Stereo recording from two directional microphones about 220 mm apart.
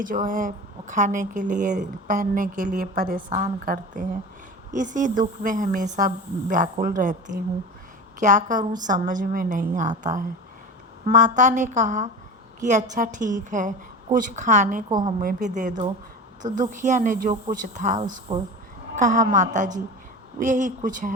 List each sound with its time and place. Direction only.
0.0 s a woman's voice: 35° right (ahead or behind)
3.2 s a woman's voice: 25° right (ahead or behind)
14.8 s a woman's voice: 20° right (ahead or behind)
15.2 s a woman's voice: 35° right (ahead or behind)